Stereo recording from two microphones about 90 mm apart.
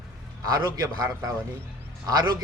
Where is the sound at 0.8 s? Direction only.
40° right (ahead or behind).